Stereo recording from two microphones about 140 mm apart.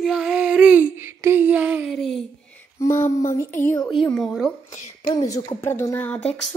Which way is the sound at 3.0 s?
20° left (ahead or behind).